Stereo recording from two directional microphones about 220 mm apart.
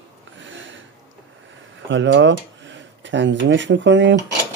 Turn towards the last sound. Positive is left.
turn(degrees=-55)  # may be behind; listen again after turning